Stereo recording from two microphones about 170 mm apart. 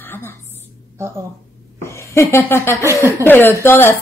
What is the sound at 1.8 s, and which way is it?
Speech, 15° left (ahead or behind).